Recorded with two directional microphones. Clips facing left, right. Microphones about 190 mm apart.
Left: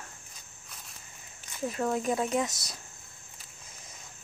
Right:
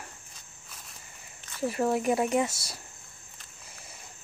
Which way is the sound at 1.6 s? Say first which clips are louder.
Right 3 dB; 5° right (ahead or behind).